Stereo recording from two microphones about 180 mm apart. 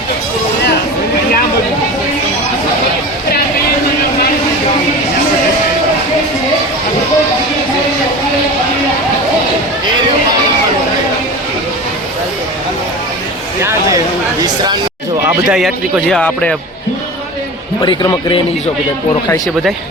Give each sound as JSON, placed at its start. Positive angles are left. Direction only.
{"t": 14.4, "sound": "a sound", "side_deg": -20}
{"t": 15.3, "sound": "speech", "side_deg": -5}
{"t": 17.8, "sound": "a man's voice", "side_deg": 25}